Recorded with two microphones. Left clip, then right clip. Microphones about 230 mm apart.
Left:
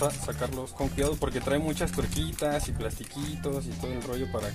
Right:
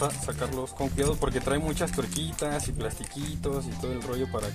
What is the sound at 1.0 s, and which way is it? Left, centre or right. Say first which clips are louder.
Speech: right 2 dB; centre.